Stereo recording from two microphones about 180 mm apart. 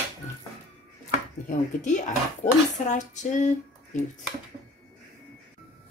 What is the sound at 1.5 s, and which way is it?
Speech, 40° left (ahead or behind).